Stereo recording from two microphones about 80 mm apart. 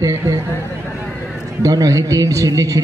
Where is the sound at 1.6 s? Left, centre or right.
Right.